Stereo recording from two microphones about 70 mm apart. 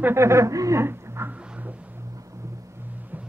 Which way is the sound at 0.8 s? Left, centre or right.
Right.